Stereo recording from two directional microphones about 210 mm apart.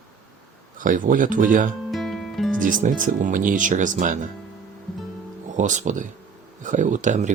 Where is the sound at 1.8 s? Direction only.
Centre (ahead or behind).